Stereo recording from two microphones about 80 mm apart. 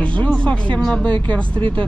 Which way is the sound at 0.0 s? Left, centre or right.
Centre.